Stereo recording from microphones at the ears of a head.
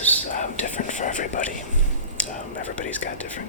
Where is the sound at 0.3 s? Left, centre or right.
Left.